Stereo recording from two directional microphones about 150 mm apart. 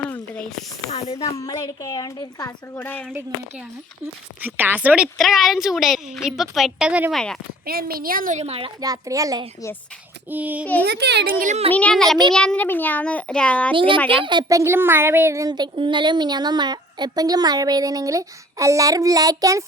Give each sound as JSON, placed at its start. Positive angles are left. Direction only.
{"t": 0.9, "sound": "speech", "side_deg": 40}
{"t": 1.2, "sound": "a woman's voice", "side_deg": 25}
{"t": 2.7, "sound": "a child's voice", "side_deg": 15}
{"t": 4.4, "sound": "a woman's voice", "side_deg": -10}
{"t": 5.1, "sound": "a woman's voice", "side_deg": 0}
{"t": 7.1, "sound": "a woman's voice", "side_deg": 5}
{"t": 7.6, "sound": "a woman's voice", "side_deg": -85}
{"t": 8.4, "sound": "a child's voice", "side_deg": -40}
{"t": 8.8, "sound": "speech", "side_deg": -25}
{"t": 10.2, "sound": "a woman's voice", "side_deg": -10}
{"t": 10.8, "sound": "speech", "side_deg": -90}
{"t": 11.7, "sound": "a woman's voice", "side_deg": 10}
{"t": 13.7, "sound": "a child's voice", "side_deg": -35}
{"t": 14.6, "sound": "speech", "side_deg": -15}